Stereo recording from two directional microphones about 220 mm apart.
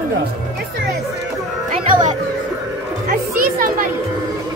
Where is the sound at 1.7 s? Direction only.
35° right (ahead or behind).